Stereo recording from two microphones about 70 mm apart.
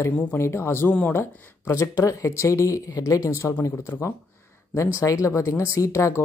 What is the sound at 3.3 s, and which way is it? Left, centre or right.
Speech, left.